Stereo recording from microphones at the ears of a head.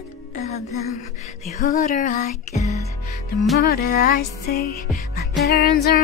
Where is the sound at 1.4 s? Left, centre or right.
Left.